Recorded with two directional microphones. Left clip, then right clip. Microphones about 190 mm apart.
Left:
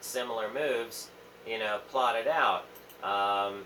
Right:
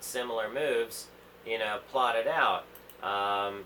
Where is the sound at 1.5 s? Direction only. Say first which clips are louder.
Right 1 dB; 45° right (ahead or behind).